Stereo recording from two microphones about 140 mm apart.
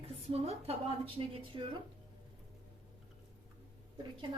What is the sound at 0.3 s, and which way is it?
A woman's voice, 45° right (ahead or behind).